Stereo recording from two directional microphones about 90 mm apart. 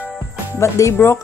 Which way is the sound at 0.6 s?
30° left (ahead or behind).